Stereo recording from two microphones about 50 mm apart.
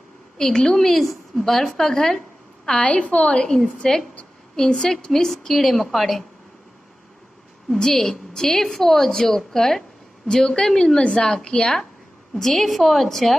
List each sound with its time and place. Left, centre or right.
0.4 s a woman's voice: centre
2.8 s a woman's voice: left; by 6.2 s centre
7.7 s a woman's voice: centre